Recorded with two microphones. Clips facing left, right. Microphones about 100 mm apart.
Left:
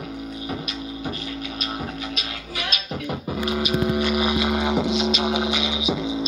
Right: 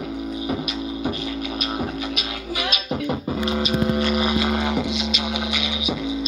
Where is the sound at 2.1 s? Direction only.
5° right (ahead or behind).